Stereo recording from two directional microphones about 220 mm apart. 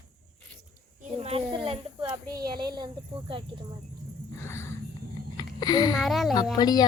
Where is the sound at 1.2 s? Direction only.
25° right (ahead or behind).